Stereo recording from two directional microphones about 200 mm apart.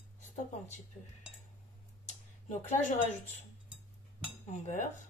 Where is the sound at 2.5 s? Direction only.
35° left (ahead or behind).